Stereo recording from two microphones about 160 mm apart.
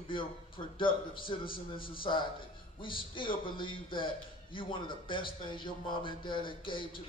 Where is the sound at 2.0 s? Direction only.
30° left (ahead or behind).